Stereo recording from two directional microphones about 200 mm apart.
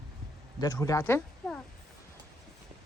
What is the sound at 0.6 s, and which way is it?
Speech, 15° left (ahead or behind).